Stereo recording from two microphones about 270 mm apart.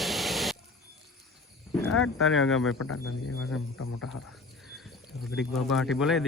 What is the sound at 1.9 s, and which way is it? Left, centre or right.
Speech, left.